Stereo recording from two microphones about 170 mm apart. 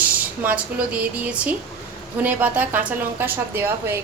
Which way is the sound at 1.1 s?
10° right (ahead or behind).